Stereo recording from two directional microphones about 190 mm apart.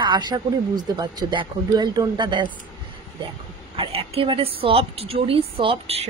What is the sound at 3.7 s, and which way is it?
A woman's voice, 30° right (ahead or behind).